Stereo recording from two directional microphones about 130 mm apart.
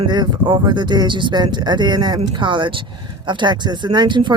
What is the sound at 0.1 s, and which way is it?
Speech, 35° right (ahead or behind).